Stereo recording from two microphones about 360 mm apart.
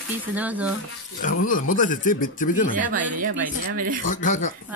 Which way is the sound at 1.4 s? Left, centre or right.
Left.